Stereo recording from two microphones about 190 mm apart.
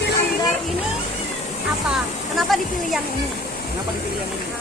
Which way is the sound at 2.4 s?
Centre (ahead or behind).